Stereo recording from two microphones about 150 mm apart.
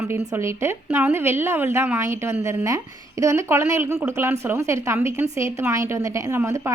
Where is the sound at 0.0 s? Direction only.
20° right (ahead or behind).